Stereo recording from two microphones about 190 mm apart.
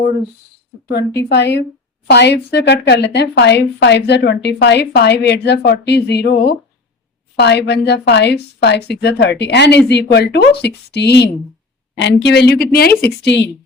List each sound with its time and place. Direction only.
1.3 s speech: 60° left (ahead or behind)
13.2 s a woman's voice: 65° left (ahead or behind)